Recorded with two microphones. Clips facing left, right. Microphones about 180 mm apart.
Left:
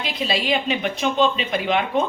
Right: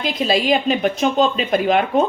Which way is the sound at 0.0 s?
45° right (ahead or behind).